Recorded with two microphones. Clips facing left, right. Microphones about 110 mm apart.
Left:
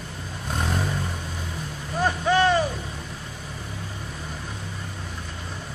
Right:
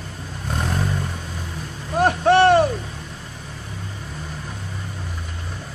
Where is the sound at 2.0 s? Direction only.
65° right (ahead or behind).